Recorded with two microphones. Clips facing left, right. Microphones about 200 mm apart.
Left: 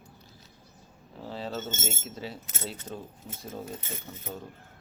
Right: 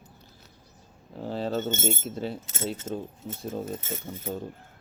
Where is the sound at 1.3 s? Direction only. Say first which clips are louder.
Right 7 dB; 45° right (ahead or behind).